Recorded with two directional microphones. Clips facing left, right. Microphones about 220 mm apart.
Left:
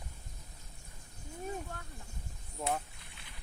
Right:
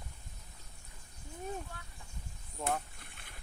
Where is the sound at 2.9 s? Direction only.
50° right (ahead or behind).